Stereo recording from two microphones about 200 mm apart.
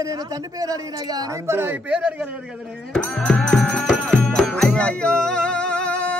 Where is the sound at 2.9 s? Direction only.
5° left (ahead or behind).